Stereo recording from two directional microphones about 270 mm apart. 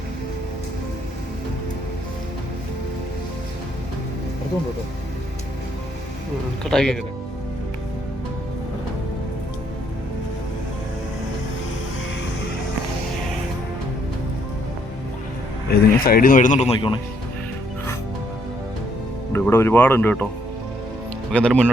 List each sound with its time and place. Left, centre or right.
6.7 s speech: centre
15.7 s speech: left
19.3 s speech: centre
21.3 s speech: centre